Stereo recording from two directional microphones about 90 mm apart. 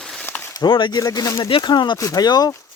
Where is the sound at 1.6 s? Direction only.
55° left (ahead or behind).